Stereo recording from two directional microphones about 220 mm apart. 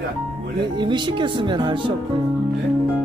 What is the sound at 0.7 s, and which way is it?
Speech, 20° right (ahead or behind).